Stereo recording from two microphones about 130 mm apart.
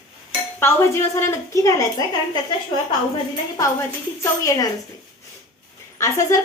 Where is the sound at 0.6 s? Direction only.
20° left (ahead or behind).